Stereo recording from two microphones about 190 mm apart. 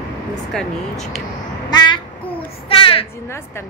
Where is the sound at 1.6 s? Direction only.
25° left (ahead or behind).